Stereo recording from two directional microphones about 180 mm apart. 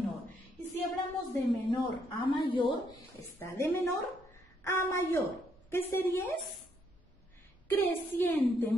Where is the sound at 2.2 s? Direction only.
25° left (ahead or behind).